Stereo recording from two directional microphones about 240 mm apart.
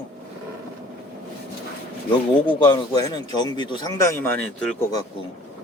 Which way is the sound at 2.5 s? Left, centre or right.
Centre.